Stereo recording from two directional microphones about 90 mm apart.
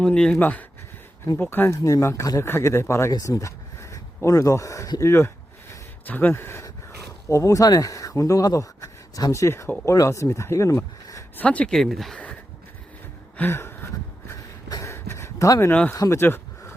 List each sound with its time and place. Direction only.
0.0 s speech: 10° left (ahead or behind); by 1.7 s 25° left (ahead or behind)
1.7 s speech: 35° left (ahead or behind)
3.1 s speech: 40° left (ahead or behind)
6.1 s speech: 20° left (ahead or behind); by 11.2 s 35° left (ahead or behind)
11.3 s speech: 15° left (ahead or behind)
13.3 s a sound: 25° left (ahead or behind)
16.0 s speech: 35° left (ahead or behind)
16.2 s a sound: 25° left (ahead or behind)